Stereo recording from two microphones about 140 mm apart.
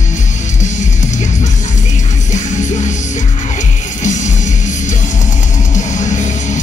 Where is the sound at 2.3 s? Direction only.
60° left (ahead or behind).